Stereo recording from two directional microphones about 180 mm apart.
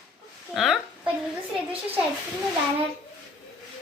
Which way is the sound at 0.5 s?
Centre (ahead or behind).